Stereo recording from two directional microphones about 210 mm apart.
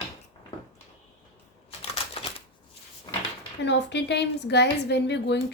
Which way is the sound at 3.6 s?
55° left (ahead or behind).